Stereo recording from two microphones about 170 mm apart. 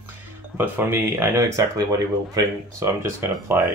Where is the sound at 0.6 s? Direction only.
10° right (ahead or behind).